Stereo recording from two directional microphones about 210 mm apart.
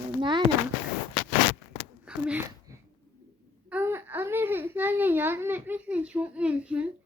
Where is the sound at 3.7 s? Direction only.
10° right (ahead or behind).